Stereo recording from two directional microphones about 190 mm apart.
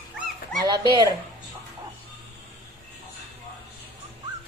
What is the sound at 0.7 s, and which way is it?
Speech, 25° right (ahead or behind).